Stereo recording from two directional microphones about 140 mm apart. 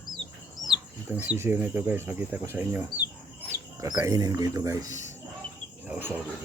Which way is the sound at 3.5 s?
25° right (ahead or behind).